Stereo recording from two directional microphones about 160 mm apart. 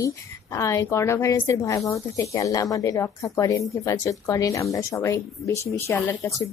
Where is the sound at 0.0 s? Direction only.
20° left (ahead or behind).